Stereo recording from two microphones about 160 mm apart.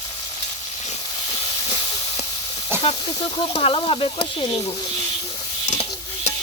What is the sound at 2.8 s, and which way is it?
Speech, 35° left (ahead or behind).